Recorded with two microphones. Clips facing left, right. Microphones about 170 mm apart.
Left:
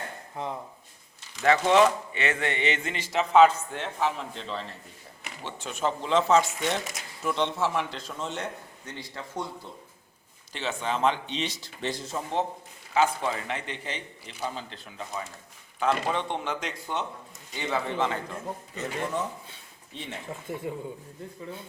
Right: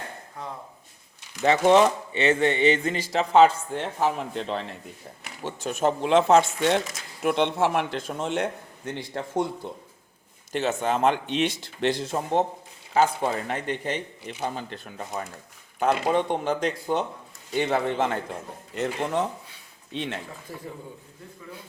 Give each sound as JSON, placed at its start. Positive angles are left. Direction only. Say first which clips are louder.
{"t": 1.5, "sound": "speech", "louder": "right 2 dB", "side_deg": -25}
{"t": 4.2, "sound": "speech", "louder": "right 6 dB", "side_deg": -60}
{"t": 5.4, "sound": "speech", "louder": "right 5 dB", "side_deg": -40}
{"t": 6.0, "sound": "speech", "louder": "right 4 dB", "side_deg": -60}
{"t": 10.5, "sound": "speech", "louder": "right 6 dB", "side_deg": -45}
{"t": 17.5, "sound": "speech", "louder": "right 6 dB", "side_deg": -55}
{"t": 18.7, "sound": "speech", "louder": "right 6 dB", "side_deg": -70}
{"t": 19.9, "sound": "speech", "louder": "right 8 dB", "side_deg": -90}
{"t": 20.5, "sound": "speech", "louder": "left 6 dB", "side_deg": 20}